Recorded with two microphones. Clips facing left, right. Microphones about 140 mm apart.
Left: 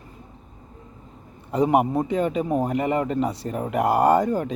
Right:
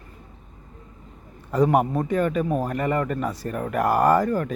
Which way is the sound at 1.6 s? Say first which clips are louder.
Even; 15° left (ahead or behind).